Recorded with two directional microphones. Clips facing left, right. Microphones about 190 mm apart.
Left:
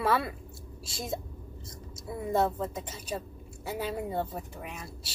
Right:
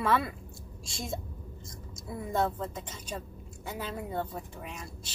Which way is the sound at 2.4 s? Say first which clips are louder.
Left 1 dB; 10° left (ahead or behind).